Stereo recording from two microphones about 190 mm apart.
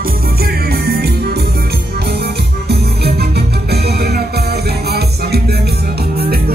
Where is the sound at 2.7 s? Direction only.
60° right (ahead or behind).